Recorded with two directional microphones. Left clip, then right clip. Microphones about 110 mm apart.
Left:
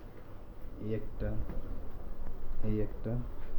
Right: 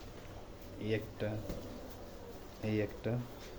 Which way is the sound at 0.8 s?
45° right (ahead or behind).